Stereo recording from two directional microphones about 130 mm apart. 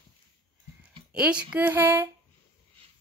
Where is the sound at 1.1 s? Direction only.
5° right (ahead or behind).